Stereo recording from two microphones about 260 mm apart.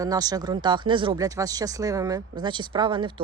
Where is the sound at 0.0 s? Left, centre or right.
Centre.